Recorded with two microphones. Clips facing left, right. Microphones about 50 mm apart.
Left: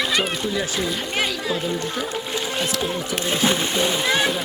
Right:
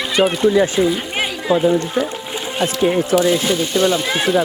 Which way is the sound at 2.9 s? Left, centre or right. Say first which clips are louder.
Right 10 dB; right.